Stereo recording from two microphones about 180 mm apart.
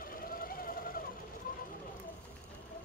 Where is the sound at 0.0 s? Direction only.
50° left (ahead or behind).